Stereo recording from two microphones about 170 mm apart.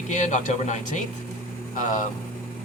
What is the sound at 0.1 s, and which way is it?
Speech, 45° left (ahead or behind).